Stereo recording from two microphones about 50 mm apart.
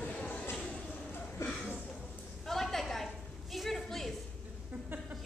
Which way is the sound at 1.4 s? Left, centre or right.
Left.